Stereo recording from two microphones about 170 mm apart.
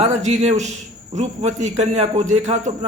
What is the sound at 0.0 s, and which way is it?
A man's voice, 45° right (ahead or behind).